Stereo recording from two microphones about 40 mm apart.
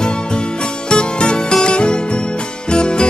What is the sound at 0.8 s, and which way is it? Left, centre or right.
Music, left.